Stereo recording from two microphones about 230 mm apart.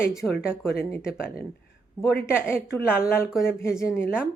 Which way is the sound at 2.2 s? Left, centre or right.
Centre.